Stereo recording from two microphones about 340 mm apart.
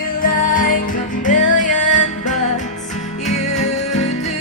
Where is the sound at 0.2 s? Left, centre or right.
Left.